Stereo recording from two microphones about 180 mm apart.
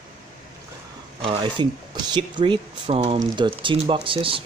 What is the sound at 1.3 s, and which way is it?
Speech, 25° right (ahead or behind).